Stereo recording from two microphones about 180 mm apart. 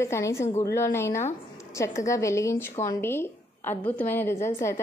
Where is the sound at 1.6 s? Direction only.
15° left (ahead or behind).